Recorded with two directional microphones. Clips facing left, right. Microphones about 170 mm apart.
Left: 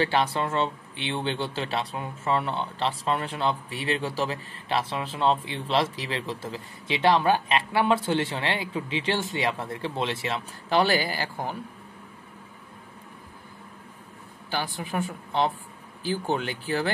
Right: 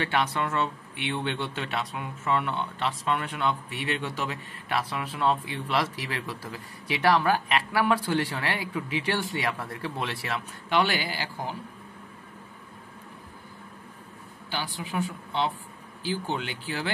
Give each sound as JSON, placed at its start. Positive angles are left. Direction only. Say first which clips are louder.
{"t": 0.0, "sound": "speech", "louder": "left 3 dB", "side_deg": 30}
{"t": 10.7, "sound": "speech", "louder": "left 3 dB", "side_deg": 40}
{"t": 14.5, "sound": "a woman's voice", "louder": "left 3 dB", "side_deg": 50}